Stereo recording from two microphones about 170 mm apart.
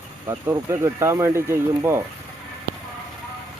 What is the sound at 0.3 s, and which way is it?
Speech, 20° right (ahead or behind).